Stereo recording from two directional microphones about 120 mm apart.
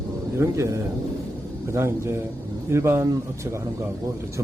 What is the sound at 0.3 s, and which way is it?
Speech, 25° right (ahead or behind).